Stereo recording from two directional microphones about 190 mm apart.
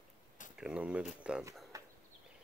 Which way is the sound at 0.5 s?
5° right (ahead or behind).